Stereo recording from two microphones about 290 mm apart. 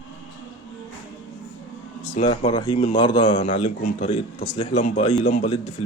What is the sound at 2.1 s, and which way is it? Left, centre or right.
A man's voice, left.